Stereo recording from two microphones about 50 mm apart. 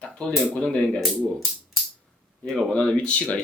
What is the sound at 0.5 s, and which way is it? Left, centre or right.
Speech, centre.